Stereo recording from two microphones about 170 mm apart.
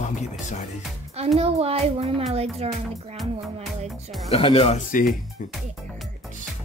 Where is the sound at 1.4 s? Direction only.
35° right (ahead or behind).